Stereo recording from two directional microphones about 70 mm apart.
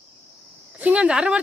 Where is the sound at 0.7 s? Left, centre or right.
Centre.